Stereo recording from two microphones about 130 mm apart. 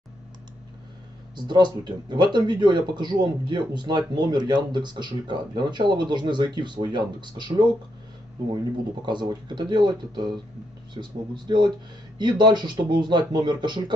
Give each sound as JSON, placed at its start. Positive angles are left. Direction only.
{"t": 1.3, "sound": "speech", "side_deg": -35}
{"t": 9.0, "sound": "speech", "side_deg": -35}